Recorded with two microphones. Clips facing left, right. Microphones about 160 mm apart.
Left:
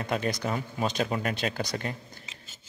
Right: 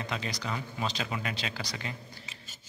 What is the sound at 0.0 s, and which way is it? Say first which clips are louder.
A man's voice: left 7 dB; 50° left (ahead or behind).